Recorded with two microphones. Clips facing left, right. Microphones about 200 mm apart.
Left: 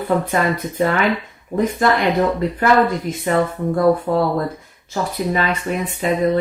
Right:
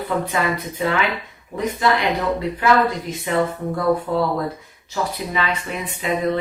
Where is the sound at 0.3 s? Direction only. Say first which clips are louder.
Left 3 dB; 45° left (ahead or behind).